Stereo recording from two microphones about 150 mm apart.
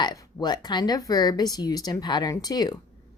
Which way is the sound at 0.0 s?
25° left (ahead or behind).